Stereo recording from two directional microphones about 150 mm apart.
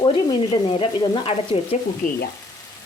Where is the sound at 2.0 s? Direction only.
65° left (ahead or behind).